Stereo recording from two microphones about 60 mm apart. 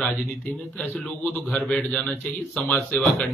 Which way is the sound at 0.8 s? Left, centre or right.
Left.